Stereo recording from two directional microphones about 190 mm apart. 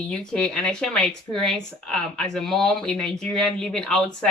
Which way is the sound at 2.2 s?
Centre (ahead or behind).